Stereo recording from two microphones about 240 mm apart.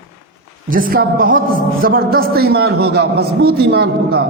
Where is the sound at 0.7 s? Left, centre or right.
Right.